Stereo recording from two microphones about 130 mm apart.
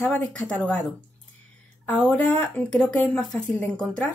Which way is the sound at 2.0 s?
10° left (ahead or behind).